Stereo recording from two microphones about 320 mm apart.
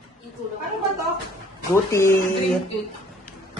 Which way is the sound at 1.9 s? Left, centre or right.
Centre.